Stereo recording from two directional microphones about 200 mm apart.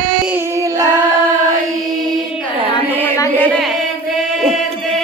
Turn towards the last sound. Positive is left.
turn(degrees=5)  # may be behind; listen again after turning